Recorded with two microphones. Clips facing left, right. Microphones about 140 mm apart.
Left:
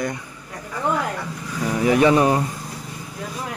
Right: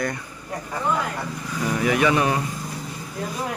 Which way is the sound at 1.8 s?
30° left (ahead or behind).